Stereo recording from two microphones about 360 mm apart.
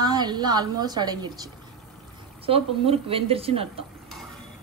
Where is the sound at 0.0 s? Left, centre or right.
Centre.